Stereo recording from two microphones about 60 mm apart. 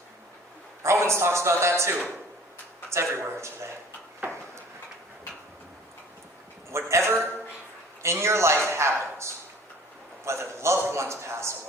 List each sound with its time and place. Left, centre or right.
0.8 s a man's voice: right
4.2 s a sound: right
6.7 s a man's voice: right